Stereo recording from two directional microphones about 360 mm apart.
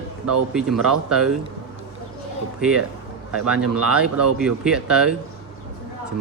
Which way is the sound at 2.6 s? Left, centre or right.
Centre.